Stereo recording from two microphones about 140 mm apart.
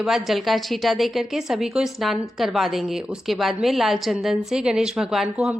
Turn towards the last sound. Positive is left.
turn(degrees=-5)  # may be behind; listen again after turning